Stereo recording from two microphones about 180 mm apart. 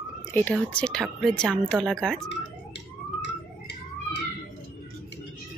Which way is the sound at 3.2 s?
75° left (ahead or behind).